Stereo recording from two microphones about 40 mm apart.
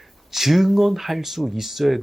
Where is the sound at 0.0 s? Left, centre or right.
Centre.